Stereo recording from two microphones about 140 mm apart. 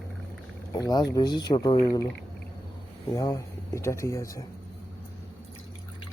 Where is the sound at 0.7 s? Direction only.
25° left (ahead or behind).